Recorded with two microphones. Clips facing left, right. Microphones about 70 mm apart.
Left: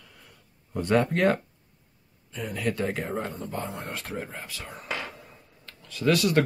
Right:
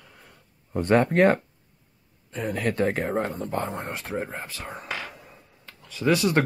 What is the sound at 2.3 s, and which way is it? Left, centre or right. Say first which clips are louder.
Speech: right 3 dB; right.